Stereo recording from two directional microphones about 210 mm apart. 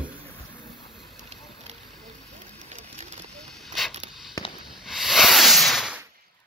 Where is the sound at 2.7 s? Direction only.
35° right (ahead or behind).